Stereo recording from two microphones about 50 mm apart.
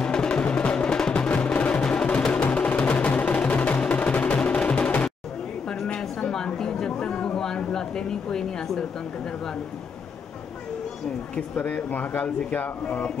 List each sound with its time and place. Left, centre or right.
0.0 s music: centre
1.3 s music: left
5.9 s a sound: centre
11.3 s speech: left